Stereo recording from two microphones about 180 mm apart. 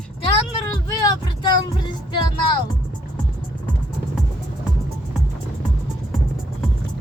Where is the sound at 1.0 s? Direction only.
20° left (ahead or behind).